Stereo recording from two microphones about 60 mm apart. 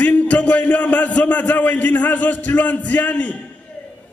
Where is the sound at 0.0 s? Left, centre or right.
Left.